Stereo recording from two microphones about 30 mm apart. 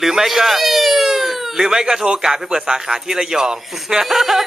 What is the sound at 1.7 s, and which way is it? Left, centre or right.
A man's voice, centre.